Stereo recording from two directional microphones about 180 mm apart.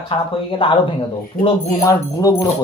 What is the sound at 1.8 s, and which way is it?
Speech, 20° left (ahead or behind).